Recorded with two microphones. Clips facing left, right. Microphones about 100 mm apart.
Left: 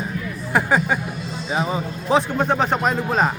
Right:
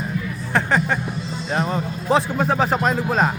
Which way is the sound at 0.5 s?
10° left (ahead or behind).